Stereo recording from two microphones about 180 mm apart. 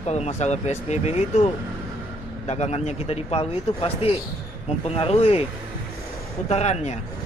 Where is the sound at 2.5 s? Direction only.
35° left (ahead or behind).